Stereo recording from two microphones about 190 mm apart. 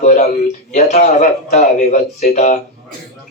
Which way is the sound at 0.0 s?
40° left (ahead or behind).